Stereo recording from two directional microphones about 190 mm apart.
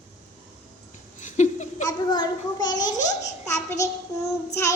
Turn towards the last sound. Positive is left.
turn(degrees=15)  # may be behind; listen again after turning